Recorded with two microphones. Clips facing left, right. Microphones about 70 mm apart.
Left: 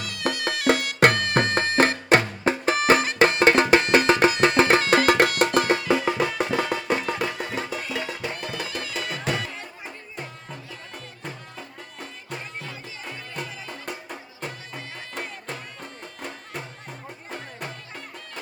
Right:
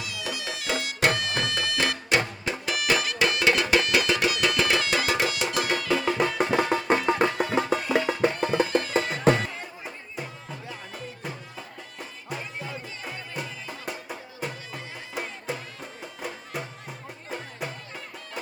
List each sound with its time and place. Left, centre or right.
0.0 s music: left
6.5 s music: right
9.6 s music: centre